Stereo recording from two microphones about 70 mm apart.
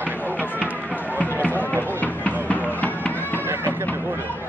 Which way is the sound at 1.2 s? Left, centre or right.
Left.